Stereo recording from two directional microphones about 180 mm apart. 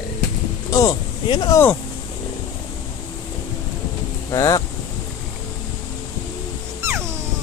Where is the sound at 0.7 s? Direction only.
20° left (ahead or behind).